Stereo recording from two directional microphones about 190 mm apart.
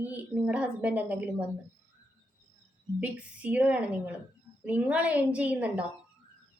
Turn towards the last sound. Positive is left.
turn(degrees=-10)  # may be behind; listen again after turning